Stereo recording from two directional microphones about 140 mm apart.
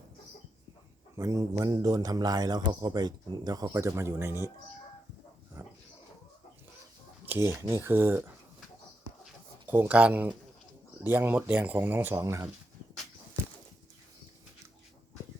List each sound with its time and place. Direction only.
1.1 s a man's voice: 25° right (ahead or behind)
5.6 s pig: 20° right (ahead or behind)
7.3 s speech: 20° right (ahead or behind)
9.6 s speech: 15° right (ahead or behind)